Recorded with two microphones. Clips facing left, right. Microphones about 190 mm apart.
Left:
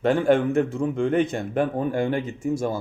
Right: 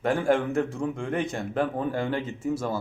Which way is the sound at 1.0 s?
20° left (ahead or behind).